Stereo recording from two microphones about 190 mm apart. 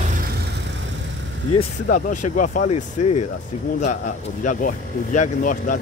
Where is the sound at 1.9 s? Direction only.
40° left (ahead or behind).